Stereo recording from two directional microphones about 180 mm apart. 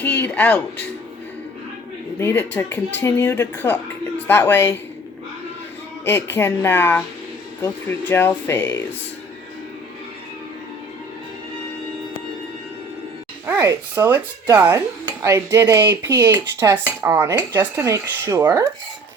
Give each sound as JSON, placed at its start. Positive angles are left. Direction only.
{"t": 0.0, "sound": "speech", "side_deg": 10}
{"t": 2.1, "sound": "speech", "side_deg": 10}
{"t": 6.1, "sound": "speech", "side_deg": 15}
{"t": 13.5, "sound": "dishes", "side_deg": -15}